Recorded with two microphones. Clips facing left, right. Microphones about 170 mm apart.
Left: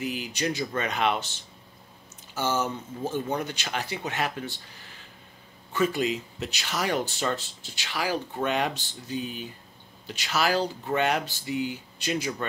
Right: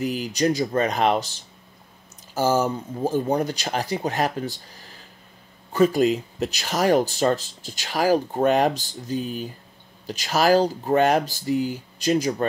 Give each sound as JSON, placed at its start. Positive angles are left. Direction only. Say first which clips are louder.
{"t": 0.0, "sound": "speech", "louder": "right 7 dB", "side_deg": -40}
{"t": 2.3, "sound": "speech", "louder": "right 7 dB", "side_deg": -40}